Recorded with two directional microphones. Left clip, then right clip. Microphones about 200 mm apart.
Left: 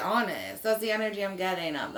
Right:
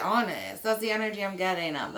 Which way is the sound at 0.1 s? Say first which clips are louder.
Right 1 dB; 10° right (ahead or behind).